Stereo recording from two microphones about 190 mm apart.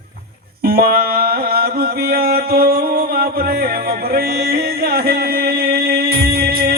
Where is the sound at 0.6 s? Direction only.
55° right (ahead or behind).